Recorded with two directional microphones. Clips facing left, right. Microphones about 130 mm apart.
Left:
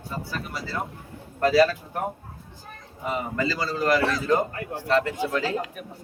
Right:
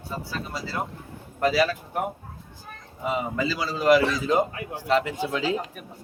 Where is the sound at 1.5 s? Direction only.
5° right (ahead or behind).